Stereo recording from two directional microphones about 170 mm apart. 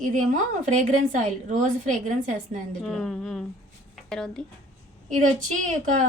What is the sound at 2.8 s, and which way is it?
A woman's voice, centre (ahead or behind).